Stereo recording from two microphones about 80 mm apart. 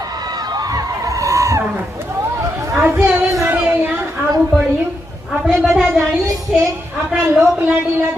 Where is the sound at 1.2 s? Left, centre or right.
Right.